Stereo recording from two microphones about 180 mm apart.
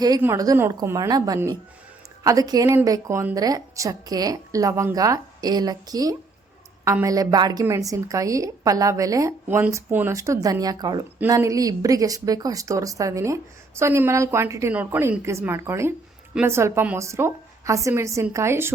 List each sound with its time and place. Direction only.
0.2 s a woman's voice: 15° right (ahead or behind)